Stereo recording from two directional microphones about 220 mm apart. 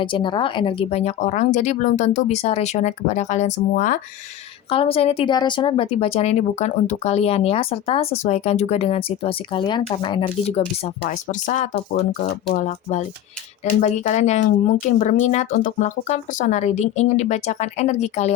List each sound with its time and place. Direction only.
0.0 s speech: 20° left (ahead or behind)
4.7 s speech: 25° left (ahead or behind)
12.2 s speech: 45° left (ahead or behind)
12.5 s speech: 30° left (ahead or behind)